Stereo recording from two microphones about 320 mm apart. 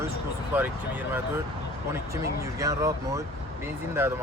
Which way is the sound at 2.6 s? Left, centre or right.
Centre.